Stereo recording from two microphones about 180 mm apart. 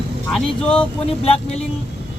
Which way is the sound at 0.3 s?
5° left (ahead or behind).